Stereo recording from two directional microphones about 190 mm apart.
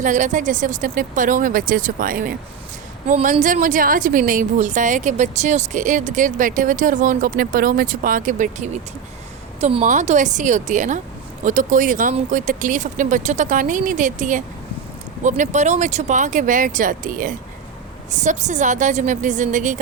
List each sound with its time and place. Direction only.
0.0 s a woman's voice: 40° right (ahead or behind)